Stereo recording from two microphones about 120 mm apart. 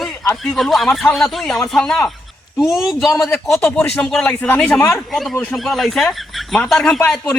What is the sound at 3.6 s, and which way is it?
A man's voice, 10° left (ahead or behind).